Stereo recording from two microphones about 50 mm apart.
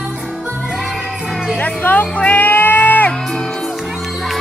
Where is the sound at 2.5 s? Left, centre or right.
Left.